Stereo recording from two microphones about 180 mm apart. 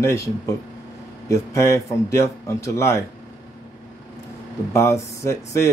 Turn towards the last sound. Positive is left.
turn(degrees=15)  # may be behind; listen again after turning